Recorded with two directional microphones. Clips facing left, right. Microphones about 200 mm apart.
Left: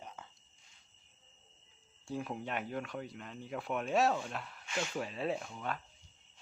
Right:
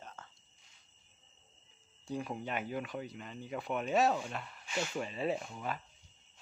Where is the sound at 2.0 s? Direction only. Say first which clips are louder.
Right 1 dB; centre (ahead or behind).